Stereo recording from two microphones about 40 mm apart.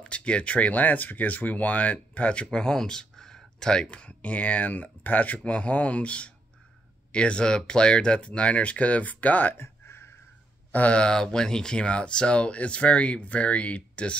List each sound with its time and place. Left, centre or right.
0.0 s speech: left
2.4 s speech: centre
3.9 s speech: left
9.6 s a sound: left
10.7 s speech: left
11.0 s speech: centre; by 14.1 s left